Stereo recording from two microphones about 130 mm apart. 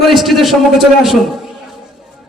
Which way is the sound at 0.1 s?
Centre (ahead or behind).